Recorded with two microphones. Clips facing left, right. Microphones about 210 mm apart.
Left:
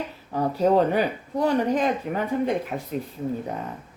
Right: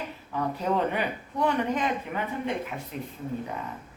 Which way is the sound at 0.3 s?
35° left (ahead or behind).